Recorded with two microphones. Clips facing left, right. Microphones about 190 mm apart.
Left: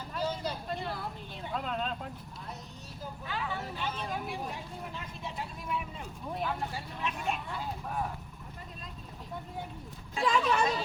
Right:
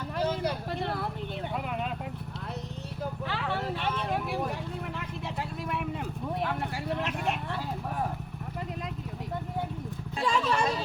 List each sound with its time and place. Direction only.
0.2 s vehicle: 70° right (ahead or behind)
1.5 s vehicle: 10° right (ahead or behind)
3.0 s vehicle: 75° right (ahead or behind)
10.2 s a sound: 5° left (ahead or behind)